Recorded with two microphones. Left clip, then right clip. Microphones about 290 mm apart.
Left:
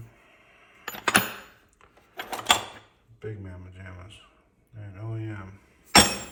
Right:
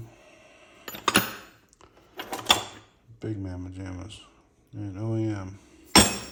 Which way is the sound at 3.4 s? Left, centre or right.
Centre.